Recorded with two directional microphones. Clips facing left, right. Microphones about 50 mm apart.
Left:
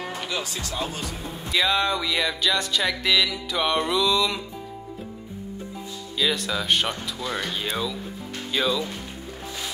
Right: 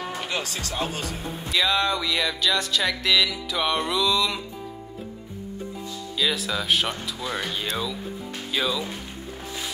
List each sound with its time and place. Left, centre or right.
0.4 s speech: right
0.7 s speech: right
1.5 s music: centre
6.1 s music: centre